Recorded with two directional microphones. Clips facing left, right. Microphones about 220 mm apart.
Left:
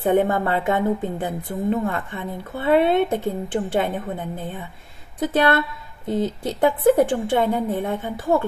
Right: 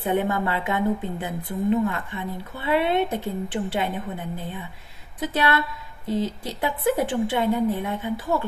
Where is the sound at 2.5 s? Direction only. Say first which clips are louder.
Left 5 dB; 50° left (ahead or behind).